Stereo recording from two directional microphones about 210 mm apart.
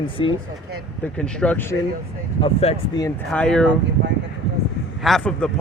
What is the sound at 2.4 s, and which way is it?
Speech, 30° left (ahead or behind).